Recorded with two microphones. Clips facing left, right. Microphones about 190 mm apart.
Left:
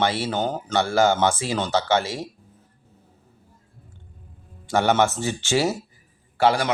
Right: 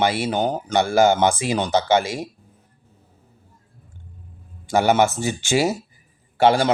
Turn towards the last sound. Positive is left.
turn(degrees=-25)  # may be behind; listen again after turning